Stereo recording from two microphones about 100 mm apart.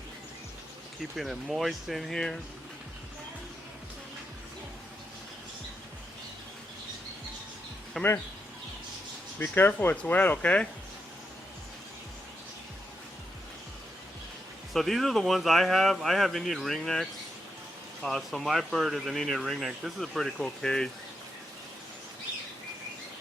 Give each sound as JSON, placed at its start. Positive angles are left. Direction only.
{"t": 1.1, "sound": "speech", "side_deg": 0}
{"t": 8.0, "sound": "speech", "side_deg": 5}
{"t": 9.4, "sound": "speech", "side_deg": 20}
{"t": 14.7, "sound": "speech", "side_deg": 0}